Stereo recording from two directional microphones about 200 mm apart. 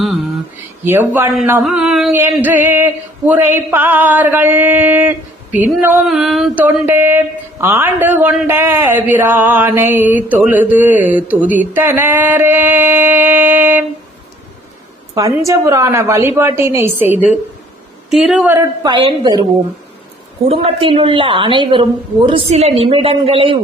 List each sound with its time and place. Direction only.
0.0 s a sound: centre (ahead or behind)
0.9 s speech: 10° right (ahead or behind)
15.1 s a woman's voice: 15° right (ahead or behind)
18.5 s a woman's voice: 20° right (ahead or behind)
20.5 s a woman's voice: 30° right (ahead or behind)